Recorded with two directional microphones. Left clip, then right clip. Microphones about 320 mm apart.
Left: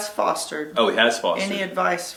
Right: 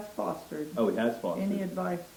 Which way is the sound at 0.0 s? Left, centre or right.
Centre.